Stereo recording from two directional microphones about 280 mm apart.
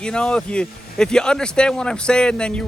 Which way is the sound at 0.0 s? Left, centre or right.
Centre.